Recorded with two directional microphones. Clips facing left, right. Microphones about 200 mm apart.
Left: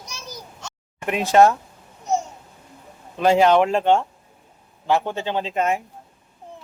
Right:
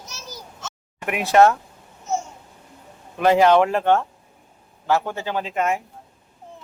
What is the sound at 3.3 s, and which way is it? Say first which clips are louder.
Speech: even; 15° left (ahead or behind).